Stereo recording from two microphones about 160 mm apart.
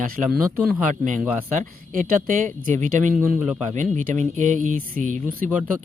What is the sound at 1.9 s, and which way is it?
Speech, 55° right (ahead or behind).